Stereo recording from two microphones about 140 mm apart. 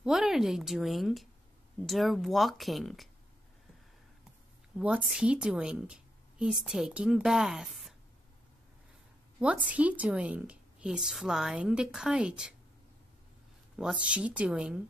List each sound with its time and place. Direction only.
0.0 s a woman's voice: 5° right (ahead or behind)
4.7 s a woman's voice: 5° right (ahead or behind)
9.4 s a woman's voice: 10° right (ahead or behind)
13.7 s a woman's voice: 5° right (ahead or behind)